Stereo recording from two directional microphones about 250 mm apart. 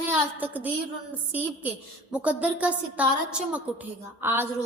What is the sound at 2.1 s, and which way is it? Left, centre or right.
A woman's voice, centre.